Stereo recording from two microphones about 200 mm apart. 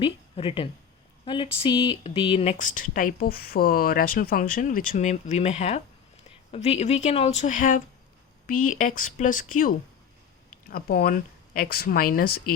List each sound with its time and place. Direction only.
0.0 s speech: 30° left (ahead or behind); by 12.3 s 45° left (ahead or behind)